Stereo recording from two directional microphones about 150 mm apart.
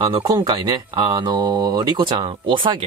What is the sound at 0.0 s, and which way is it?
Speech, 30° right (ahead or behind).